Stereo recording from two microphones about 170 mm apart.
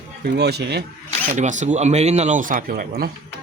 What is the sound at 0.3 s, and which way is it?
Speech, 80° right.